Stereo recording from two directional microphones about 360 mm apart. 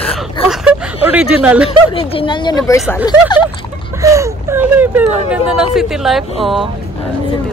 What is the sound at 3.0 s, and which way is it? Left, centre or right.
Speech, centre.